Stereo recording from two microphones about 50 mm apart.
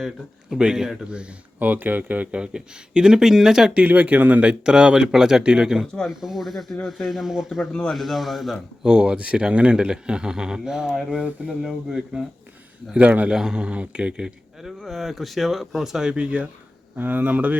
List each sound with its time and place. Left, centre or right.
0.6 s a man's voice: centre
1.5 s a man's voice: right; by 3.7 s centre
3.8 s speech: right
4.6 s a man's voice: centre
7.7 s speech: centre
7.9 s speech: centre
8.8 s a man's voice: centre
13.0 s speech: right
13.3 s speech: centre
14.6 s speech: centre
16.1 s speech: right
17.0 s speech: right